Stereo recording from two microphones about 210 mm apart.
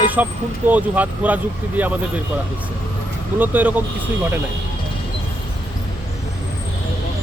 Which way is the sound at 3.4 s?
10° right (ahead or behind).